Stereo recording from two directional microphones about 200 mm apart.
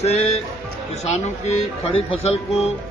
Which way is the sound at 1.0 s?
30° left (ahead or behind).